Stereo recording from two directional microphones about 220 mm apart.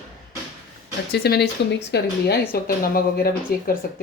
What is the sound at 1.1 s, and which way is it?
Speech, 45° left (ahead or behind).